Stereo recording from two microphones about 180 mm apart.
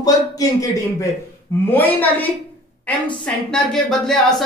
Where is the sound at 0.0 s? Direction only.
20° left (ahead or behind).